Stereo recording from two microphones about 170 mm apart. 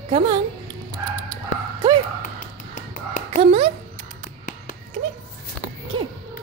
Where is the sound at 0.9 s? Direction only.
25° right (ahead or behind).